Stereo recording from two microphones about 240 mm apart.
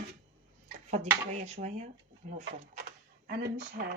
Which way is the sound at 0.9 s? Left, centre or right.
Right.